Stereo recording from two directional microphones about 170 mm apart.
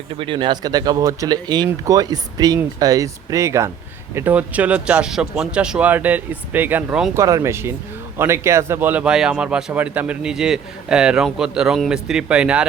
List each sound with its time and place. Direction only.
0.2 s speech: 30° right (ahead or behind); by 7.2 s 10° right (ahead or behind)
7.2 s speech: 20° right (ahead or behind)